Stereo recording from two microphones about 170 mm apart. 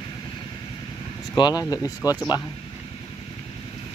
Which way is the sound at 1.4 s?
25° left (ahead or behind).